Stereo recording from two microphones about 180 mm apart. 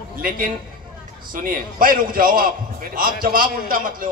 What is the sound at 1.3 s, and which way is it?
A man's voice, 50° right (ahead or behind).